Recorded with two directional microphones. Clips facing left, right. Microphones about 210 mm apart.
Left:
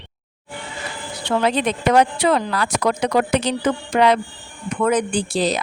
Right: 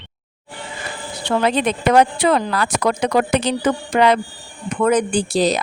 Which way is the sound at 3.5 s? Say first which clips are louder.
Right 2 dB; 55° right (ahead or behind).